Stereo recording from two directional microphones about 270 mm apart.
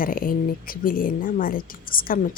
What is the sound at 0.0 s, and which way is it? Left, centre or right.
Speech, left.